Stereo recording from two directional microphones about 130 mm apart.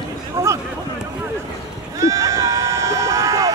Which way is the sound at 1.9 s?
25° right (ahead or behind).